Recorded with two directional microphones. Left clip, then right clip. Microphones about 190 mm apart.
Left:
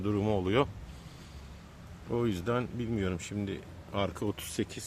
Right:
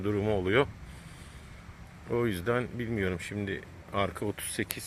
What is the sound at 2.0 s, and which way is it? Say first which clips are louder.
Speech: right 2 dB; centre (ahead or behind).